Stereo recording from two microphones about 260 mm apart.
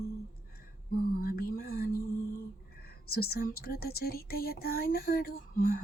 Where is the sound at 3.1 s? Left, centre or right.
Left.